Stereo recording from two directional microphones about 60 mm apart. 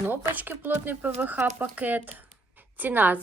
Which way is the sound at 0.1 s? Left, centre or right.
Right.